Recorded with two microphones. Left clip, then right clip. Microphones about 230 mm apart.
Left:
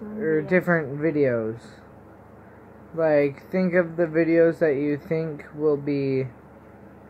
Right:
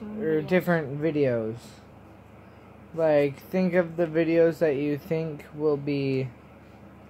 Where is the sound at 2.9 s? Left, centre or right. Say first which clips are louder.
Left 2 dB; centre.